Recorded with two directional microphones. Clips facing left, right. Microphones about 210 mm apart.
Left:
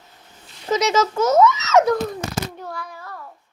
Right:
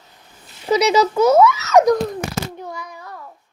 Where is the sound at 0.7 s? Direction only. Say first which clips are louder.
Right 4 dB; 15° right (ahead or behind).